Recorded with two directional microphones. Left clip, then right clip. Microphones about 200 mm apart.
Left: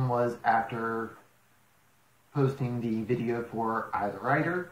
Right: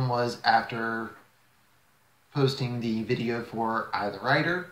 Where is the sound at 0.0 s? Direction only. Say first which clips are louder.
Right 1 dB; 15° right (ahead or behind).